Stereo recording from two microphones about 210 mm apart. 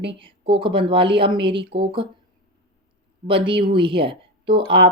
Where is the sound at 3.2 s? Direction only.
25° right (ahead or behind).